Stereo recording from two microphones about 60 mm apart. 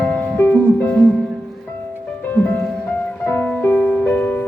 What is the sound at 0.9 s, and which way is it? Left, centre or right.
Music, centre.